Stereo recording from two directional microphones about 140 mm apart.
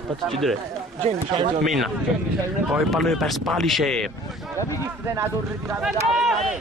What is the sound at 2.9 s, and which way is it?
A man's voice, centre (ahead or behind).